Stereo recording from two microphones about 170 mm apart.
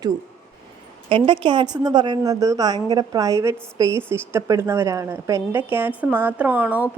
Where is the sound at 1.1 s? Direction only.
30° right (ahead or behind).